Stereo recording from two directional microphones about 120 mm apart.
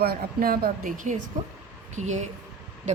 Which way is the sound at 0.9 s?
90° right.